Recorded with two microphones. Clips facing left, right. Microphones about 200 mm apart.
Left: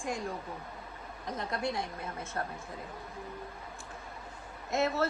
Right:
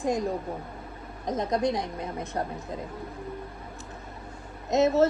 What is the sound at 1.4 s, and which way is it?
A woman's voice, 20° right (ahead or behind).